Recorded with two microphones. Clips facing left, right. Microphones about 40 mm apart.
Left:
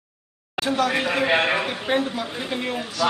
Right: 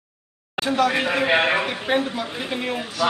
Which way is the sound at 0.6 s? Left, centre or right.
Centre.